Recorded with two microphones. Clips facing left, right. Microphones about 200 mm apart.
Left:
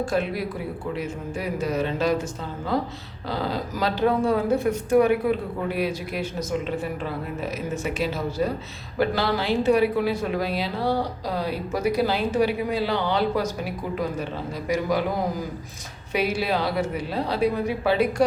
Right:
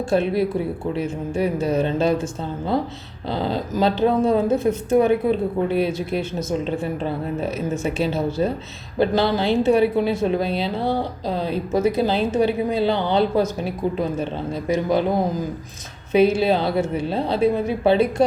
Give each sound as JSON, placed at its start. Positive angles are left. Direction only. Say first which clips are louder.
{"t": 0.0, "sound": "speech", "louder": "right 5 dB", "side_deg": -25}